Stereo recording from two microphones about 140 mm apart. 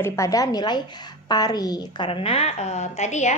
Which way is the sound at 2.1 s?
40° left (ahead or behind).